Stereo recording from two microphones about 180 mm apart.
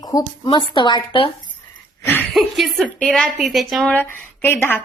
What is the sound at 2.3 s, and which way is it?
A woman's voice, centre (ahead or behind).